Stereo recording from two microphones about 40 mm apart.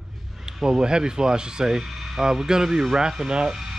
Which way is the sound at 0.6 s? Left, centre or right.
Centre.